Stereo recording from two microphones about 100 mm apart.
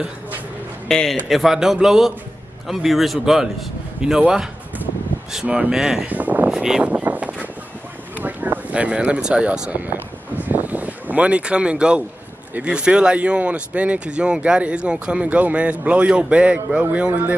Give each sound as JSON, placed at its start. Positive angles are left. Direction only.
{"t": 0.8, "sound": "a man's voice", "side_deg": 5}
{"t": 6.0, "sound": "speech", "side_deg": -15}
{"t": 10.4, "sound": "a sound", "side_deg": -15}
{"t": 12.5, "sound": "speech", "side_deg": -10}